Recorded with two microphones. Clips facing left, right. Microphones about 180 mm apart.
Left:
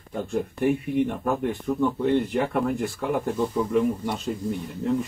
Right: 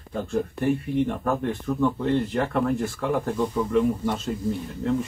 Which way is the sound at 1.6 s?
15° left (ahead or behind).